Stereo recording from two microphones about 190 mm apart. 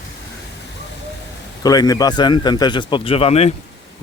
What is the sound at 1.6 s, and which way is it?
A man's voice, 20° left (ahead or behind).